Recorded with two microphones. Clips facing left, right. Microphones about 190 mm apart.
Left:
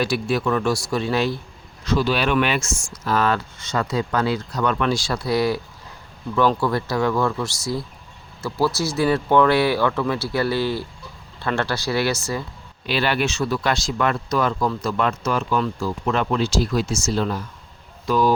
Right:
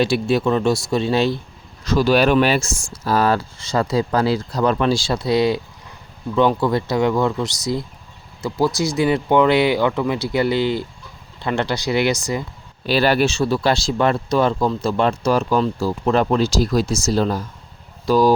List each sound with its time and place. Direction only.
0.0 s speech: 25° right (ahead or behind)
1.8 s speech: 40° right (ahead or behind); by 12.5 s 15° right (ahead or behind)
12.8 s speech: 40° right (ahead or behind)